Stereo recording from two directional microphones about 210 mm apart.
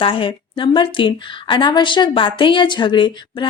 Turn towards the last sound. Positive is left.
turn(degrees=20)  # may be behind; listen again after turning